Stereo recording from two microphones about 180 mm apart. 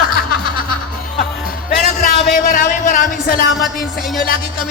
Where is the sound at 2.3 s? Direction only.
45° left (ahead or behind).